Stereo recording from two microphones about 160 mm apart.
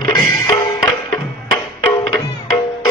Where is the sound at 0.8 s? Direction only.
20° left (ahead or behind).